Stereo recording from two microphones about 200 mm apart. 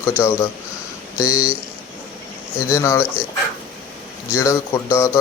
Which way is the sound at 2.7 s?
15° left (ahead or behind).